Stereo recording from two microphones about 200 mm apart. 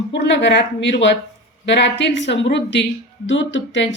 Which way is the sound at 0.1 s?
60° left (ahead or behind).